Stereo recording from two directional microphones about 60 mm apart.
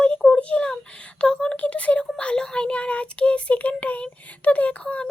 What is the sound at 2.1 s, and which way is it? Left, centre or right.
Child singing, centre.